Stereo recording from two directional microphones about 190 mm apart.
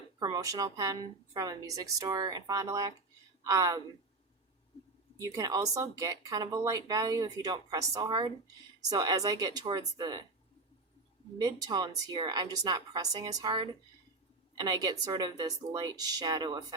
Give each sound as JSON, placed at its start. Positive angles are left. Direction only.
{"t": 0.2, "sound": "speech", "side_deg": -20}
{"t": 5.2, "sound": "speech", "side_deg": -20}
{"t": 11.3, "sound": "a woman's voice", "side_deg": -20}